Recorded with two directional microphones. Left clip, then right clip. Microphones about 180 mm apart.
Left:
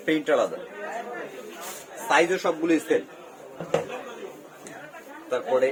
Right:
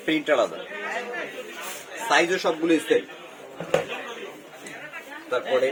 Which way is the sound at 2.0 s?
25° left (ahead or behind).